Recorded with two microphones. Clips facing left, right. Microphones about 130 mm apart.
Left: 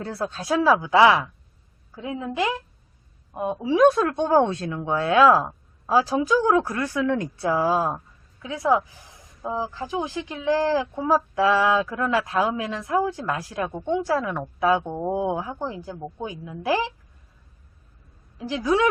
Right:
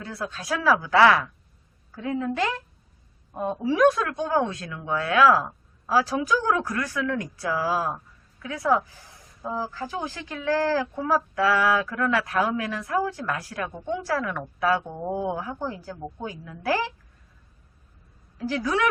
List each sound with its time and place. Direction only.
0.0 s a woman's voice: 30° left (ahead or behind)
3.9 s speech: 35° left (ahead or behind); by 16.9 s 20° left (ahead or behind)
18.3 s speech: 20° left (ahead or behind)